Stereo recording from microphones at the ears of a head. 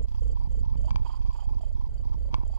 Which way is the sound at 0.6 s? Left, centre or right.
Right.